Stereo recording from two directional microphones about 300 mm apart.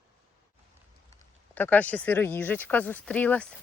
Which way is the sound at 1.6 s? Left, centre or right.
Centre.